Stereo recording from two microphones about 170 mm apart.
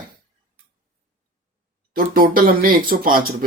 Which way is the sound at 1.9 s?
55° right (ahead or behind).